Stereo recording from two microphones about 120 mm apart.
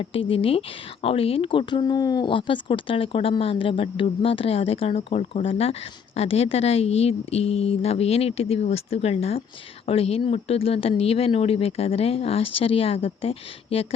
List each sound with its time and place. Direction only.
0.0 s speech: 50° left (ahead or behind)